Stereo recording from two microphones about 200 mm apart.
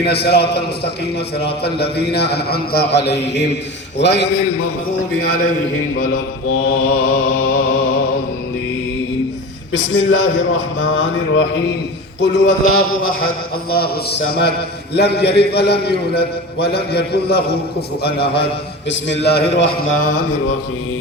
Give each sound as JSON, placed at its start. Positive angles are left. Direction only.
{"t": 0.0, "sound": "a man's voice", "side_deg": 55}
{"t": 6.7, "sound": "a man's voice", "side_deg": 55}
{"t": 9.7, "sound": "a man's voice", "side_deg": 80}
{"t": 12.2, "sound": "a man's voice", "side_deg": 60}
{"t": 13.7, "sound": "a man's voice", "side_deg": 50}